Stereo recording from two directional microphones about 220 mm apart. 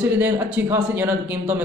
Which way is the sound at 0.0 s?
5° right (ahead or behind).